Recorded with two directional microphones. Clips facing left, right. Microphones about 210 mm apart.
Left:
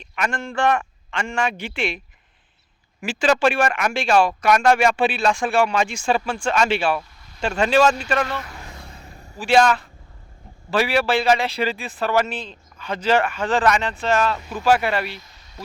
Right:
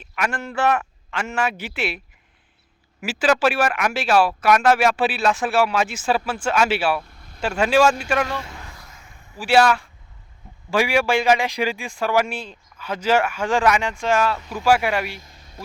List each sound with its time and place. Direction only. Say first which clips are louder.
0.0 s speech: even; 5° right (ahead or behind)
3.0 s speech: even; 5° right (ahead or behind)
7.0 s vehicle: right 2 dB; 55° right (ahead or behind)
7.4 s speech: even; 10° right (ahead or behind)
8.7 s a sound: left 5 dB; 30° left (ahead or behind)
9.4 s speech: even; 5° right (ahead or behind)
15.2 s a sound: even; 50° right (ahead or behind)